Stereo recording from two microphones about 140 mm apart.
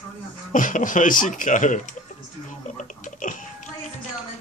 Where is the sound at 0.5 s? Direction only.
70° left (ahead or behind).